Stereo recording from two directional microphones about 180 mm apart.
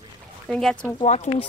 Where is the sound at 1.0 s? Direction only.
40° left (ahead or behind).